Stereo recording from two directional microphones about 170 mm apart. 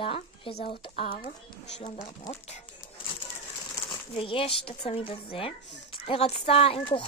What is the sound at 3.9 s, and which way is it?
Speech, 30° left (ahead or behind).